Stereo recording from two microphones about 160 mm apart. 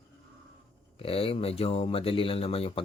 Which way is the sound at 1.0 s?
35° left (ahead or behind).